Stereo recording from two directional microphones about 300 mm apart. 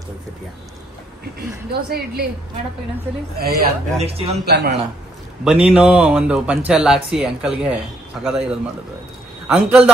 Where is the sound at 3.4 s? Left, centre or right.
Right.